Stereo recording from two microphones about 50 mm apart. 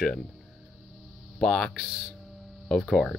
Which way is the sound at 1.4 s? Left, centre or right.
Centre.